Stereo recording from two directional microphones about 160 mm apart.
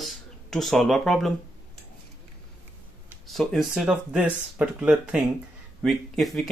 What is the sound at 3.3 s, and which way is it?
Speech, centre (ahead or behind).